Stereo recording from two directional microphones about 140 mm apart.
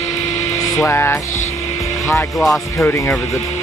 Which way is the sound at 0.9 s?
20° left (ahead or behind).